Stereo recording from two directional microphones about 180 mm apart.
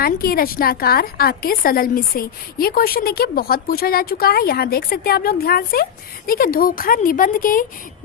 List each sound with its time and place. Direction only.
0.0 s a woman's voice: 55° left (ahead or behind)